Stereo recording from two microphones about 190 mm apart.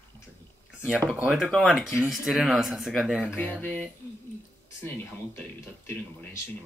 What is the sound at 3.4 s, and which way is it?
Speech, 10° left (ahead or behind).